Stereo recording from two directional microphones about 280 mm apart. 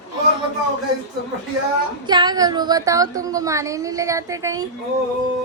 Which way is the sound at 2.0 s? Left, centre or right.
Centre.